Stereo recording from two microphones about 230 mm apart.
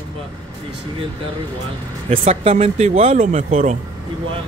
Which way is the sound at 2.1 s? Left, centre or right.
Right.